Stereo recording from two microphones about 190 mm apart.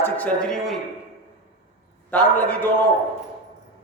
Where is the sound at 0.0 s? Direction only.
5° left (ahead or behind).